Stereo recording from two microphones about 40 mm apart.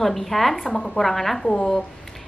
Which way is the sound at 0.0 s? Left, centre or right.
Centre.